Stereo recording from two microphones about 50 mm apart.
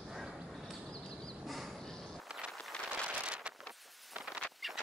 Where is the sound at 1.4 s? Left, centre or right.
Centre.